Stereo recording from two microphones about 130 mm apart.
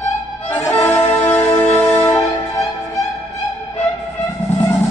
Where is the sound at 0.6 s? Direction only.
20° left (ahead or behind).